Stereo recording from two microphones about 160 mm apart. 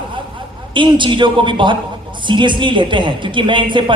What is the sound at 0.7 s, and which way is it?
A man's voice, 30° right (ahead or behind).